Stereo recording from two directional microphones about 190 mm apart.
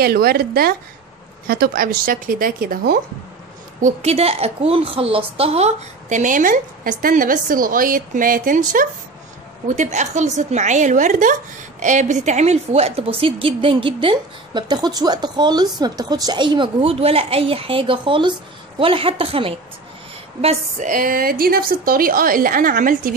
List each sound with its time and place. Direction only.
0.0 s a woman's voice: 55° right (ahead or behind)
3.8 s a woman's voice: 35° right (ahead or behind)
20.4 s a woman's voice: 40° right (ahead or behind)